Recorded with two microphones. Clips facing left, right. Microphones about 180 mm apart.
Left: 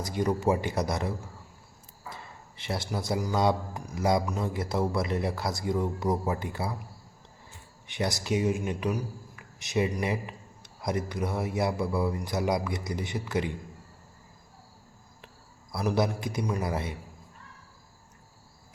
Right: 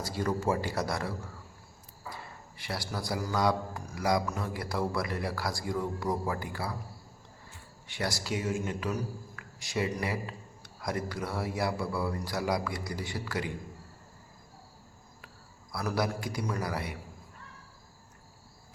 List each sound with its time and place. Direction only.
0.0 s a man's voice: 20° left (ahead or behind)
2.6 s a man's voice: 25° left (ahead or behind)
7.9 s a man's voice: 20° left (ahead or behind)
15.7 s a man's voice: 20° left (ahead or behind)